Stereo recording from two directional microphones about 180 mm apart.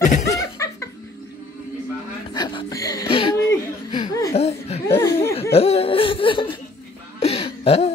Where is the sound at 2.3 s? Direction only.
25° left (ahead or behind).